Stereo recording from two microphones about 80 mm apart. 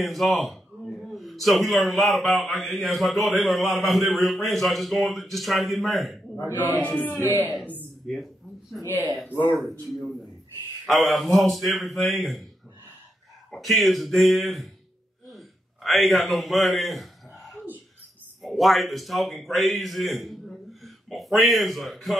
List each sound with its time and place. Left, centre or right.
0.0 s a man's voice: centre
6.8 s music: centre
8.0 s a man's voice: centre
9.3 s music: left
9.6 s a man's voice: centre
13.5 s a man's voice: centre
15.2 s a sound: centre
18.4 s a man's voice: centre